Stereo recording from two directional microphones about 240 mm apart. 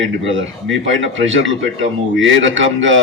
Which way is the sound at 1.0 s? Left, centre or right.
Right.